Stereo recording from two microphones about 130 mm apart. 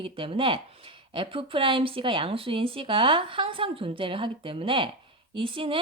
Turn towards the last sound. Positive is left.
turn(degrees=-45)  # may be behind; listen again after turning